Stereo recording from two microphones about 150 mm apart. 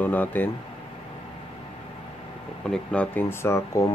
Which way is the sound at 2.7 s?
10° left (ahead or behind).